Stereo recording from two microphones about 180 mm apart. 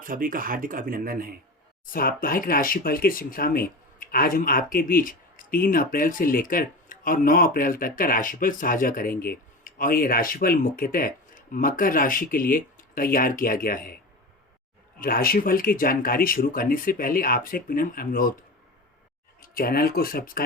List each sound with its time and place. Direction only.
0.0 s speech: 50° right (ahead or behind)
1.9 s speech: 55° left (ahead or behind)
14.9 s speech: 55° left (ahead or behind)
19.4 s speech: 55° left (ahead or behind)